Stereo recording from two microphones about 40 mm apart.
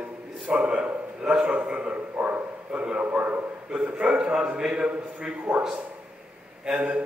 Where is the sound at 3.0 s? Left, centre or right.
Right.